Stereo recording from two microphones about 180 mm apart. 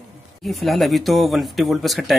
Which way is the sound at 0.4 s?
Centre (ahead or behind).